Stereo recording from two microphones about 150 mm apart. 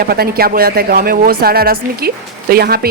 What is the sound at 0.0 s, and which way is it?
A woman's voice, 90° right.